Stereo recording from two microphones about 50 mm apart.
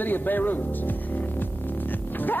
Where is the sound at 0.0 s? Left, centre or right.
Left.